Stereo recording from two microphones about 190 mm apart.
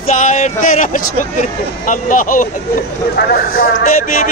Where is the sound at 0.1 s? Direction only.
40° left (ahead or behind).